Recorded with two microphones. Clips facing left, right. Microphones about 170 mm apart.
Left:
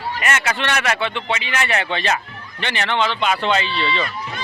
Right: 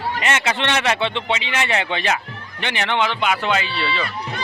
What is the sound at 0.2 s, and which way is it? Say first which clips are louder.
Speech: even; 20° right (ahead or behind).